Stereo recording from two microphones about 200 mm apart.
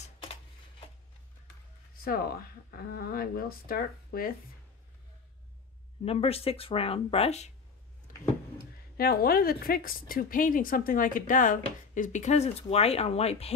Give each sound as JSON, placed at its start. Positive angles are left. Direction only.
{"t": 2.0, "sound": "a woman's voice", "side_deg": 50}
{"t": 6.0, "sound": "speech", "side_deg": 30}
{"t": 8.1, "sound": "a sound", "side_deg": 40}
{"t": 8.9, "sound": "a woman's voice", "side_deg": 50}